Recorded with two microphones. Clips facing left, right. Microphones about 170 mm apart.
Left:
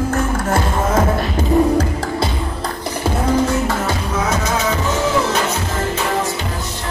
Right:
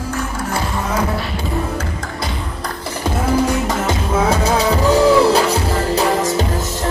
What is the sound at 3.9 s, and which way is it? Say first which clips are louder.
Music: right 3 dB; 30° right (ahead or behind).